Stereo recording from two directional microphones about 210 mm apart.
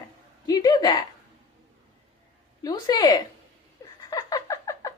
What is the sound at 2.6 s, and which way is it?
A woman's voice, 20° left (ahead or behind).